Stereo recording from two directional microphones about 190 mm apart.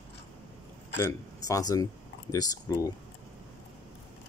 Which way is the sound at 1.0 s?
20° left (ahead or behind).